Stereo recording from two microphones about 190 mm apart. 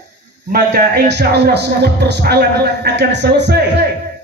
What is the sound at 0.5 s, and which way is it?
A man's voice, 60° right (ahead or behind).